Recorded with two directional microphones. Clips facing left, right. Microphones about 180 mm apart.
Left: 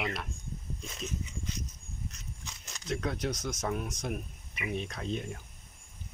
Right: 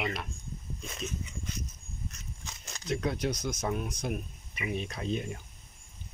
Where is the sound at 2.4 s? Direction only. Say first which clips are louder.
Right 2 dB; 50° right (ahead or behind).